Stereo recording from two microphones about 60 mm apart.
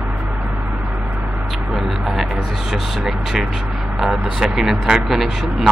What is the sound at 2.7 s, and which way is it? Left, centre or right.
Speech, centre.